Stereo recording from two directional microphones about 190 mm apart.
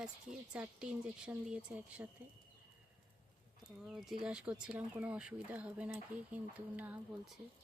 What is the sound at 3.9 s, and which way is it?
Speech, 5° right (ahead or behind).